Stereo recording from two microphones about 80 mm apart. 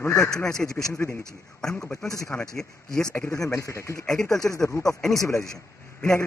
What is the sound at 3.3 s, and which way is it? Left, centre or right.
Speech, left.